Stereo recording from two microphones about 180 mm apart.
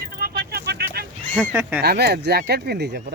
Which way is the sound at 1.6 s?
10° right (ahead or behind).